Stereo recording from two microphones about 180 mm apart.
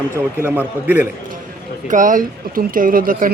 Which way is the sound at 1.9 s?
45° right (ahead or behind).